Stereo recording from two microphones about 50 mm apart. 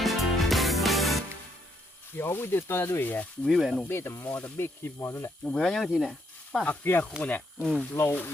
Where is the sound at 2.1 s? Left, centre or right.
Left.